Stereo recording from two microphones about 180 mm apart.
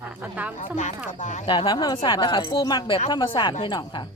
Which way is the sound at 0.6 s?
45° left (ahead or behind).